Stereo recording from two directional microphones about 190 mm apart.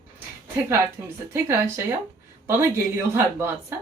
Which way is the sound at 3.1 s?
10° right (ahead or behind).